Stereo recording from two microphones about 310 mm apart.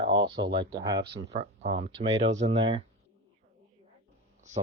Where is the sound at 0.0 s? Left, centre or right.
Centre.